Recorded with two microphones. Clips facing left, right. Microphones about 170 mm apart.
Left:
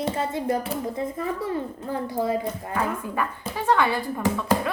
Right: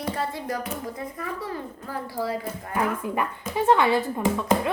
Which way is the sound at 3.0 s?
15° right (ahead or behind).